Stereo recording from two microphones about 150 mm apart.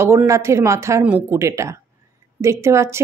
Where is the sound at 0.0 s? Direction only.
15° right (ahead or behind).